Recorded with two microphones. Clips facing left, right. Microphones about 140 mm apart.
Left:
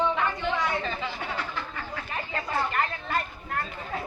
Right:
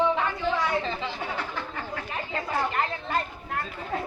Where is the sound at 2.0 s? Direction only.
15° right (ahead or behind).